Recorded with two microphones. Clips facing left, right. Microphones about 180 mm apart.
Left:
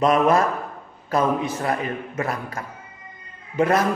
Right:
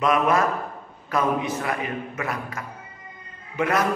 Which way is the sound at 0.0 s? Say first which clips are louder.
Left 3 dB; 35° left (ahead or behind).